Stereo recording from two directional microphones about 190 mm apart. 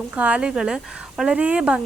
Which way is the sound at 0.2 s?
5° right (ahead or behind).